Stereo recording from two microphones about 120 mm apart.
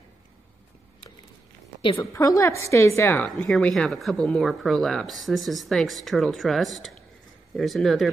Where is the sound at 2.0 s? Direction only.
25° left (ahead or behind).